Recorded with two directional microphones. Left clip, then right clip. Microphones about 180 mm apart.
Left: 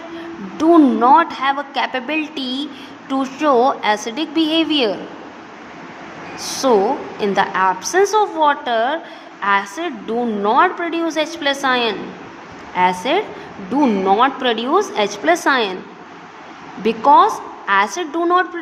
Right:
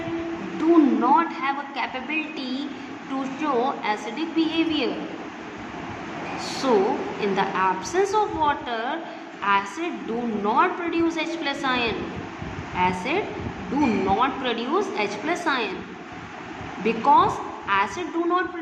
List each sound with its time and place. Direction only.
0.6 s a woman's voice: 35° left (ahead or behind)
6.4 s a woman's voice: 30° left (ahead or behind)
16.8 s a woman's voice: 30° left (ahead or behind)